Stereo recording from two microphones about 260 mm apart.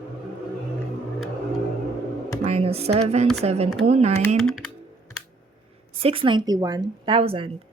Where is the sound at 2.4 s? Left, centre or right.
Right.